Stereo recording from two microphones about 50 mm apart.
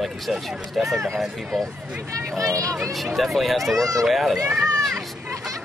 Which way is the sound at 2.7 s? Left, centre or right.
Centre.